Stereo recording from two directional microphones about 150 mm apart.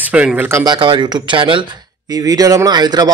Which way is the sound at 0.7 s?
35° right (ahead or behind).